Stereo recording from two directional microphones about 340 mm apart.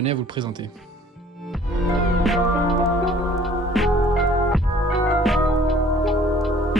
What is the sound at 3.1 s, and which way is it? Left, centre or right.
Music, centre.